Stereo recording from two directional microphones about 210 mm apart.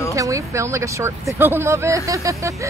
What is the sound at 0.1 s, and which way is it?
Speech, 15° right (ahead or behind).